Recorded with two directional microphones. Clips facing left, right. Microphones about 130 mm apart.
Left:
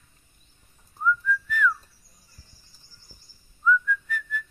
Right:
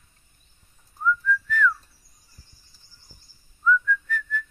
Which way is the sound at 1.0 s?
10° left (ahead or behind).